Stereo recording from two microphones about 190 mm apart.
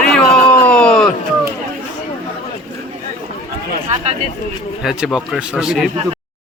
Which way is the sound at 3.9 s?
35° right (ahead or behind).